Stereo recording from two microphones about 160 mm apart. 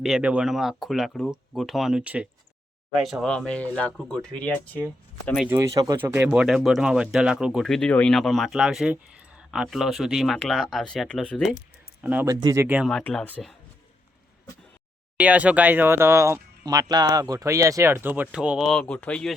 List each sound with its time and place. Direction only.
0.0 s speech: 5° right (ahead or behind)
5.5 s speech: 15° right (ahead or behind); by 11.4 s 5° left (ahead or behind)
12.0 s speech: 10° right (ahead or behind)
12.3 s speech: 20° right (ahead or behind)
12.6 s speech: 5° right (ahead or behind)
12.9 s speech: 5° left (ahead or behind)
15.2 s speech: 10° right (ahead or behind); by 19.3 s 5° left (ahead or behind)